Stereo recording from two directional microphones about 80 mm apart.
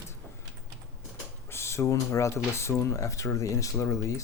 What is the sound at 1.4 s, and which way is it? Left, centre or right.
Speech, left.